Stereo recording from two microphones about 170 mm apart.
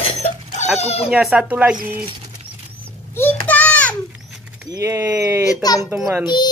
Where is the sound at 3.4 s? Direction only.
10° left (ahead or behind).